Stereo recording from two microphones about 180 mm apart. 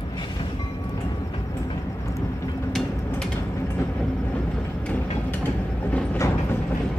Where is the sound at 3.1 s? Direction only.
10° left (ahead or behind).